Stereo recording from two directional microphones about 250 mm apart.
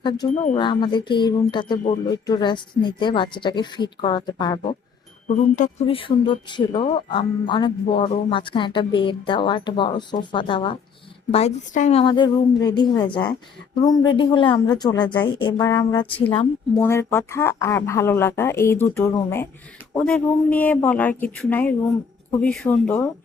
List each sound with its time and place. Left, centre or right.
0.4 s speech: left
5.5 s speech: left
16.8 s speech: centre